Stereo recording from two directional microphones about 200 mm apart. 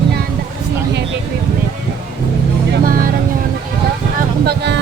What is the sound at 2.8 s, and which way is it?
Vehicle, 45° right (ahead or behind).